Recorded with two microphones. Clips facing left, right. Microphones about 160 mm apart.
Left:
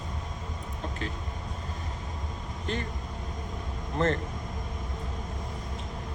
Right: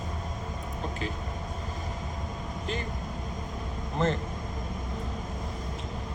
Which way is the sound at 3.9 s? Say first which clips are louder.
Left 1 dB; centre (ahead or behind).